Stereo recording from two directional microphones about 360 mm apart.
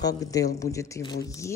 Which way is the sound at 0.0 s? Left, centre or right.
Centre.